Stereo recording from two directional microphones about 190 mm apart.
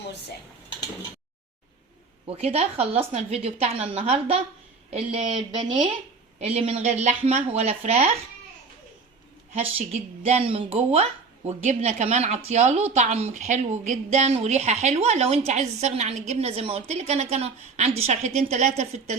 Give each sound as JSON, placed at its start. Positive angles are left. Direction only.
{"t": 2.2, "sound": "speech", "side_deg": -30}
{"t": 9.9, "sound": "speech", "side_deg": -35}